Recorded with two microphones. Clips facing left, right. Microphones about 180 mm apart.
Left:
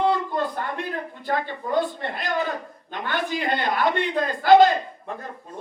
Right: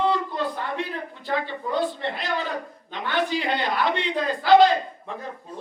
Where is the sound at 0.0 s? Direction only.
50° left (ahead or behind).